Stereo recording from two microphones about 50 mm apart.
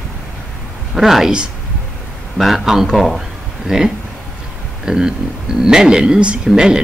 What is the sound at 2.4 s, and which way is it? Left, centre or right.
A man's voice, centre.